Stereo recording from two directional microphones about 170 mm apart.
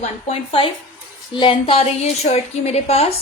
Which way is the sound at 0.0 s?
35° left (ahead or behind).